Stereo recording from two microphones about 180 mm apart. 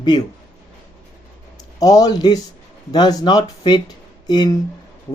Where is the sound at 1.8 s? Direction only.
20° left (ahead or behind).